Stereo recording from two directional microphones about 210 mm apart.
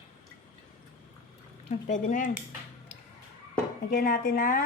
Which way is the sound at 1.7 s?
40° left (ahead or behind).